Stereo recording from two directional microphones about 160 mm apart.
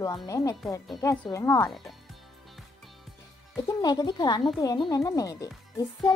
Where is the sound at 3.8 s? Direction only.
25° left (ahead or behind).